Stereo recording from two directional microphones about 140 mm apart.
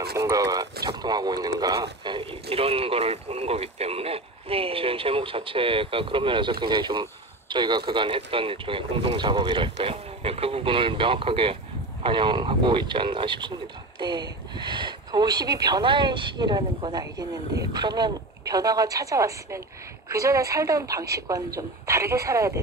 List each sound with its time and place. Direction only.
0.2 s speech: 25° right (ahead or behind)
9.8 s speech: 45° right (ahead or behind); by 22.6 s 20° right (ahead or behind)